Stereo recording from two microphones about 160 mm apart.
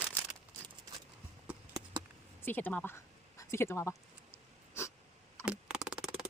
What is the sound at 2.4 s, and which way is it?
Speech, 10° left (ahead or behind).